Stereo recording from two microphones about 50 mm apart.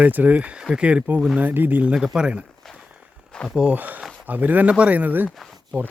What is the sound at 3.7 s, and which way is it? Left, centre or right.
Speech, right.